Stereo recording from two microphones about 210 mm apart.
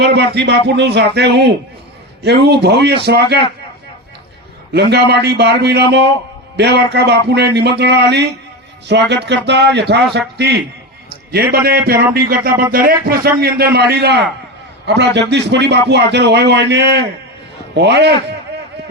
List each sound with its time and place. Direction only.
0.0 s speech: 55° right (ahead or behind)
4.7 s speech: 55° right (ahead or behind)
11.9 s a man's voice: 45° right (ahead or behind)